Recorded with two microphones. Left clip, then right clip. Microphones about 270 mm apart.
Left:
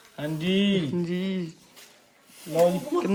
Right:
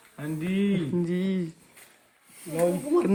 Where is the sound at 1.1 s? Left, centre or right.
Left.